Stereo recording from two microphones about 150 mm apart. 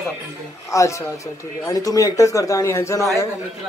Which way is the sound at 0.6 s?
20° left (ahead or behind).